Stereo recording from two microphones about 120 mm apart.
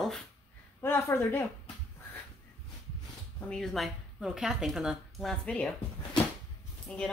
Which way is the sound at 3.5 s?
5° left (ahead or behind).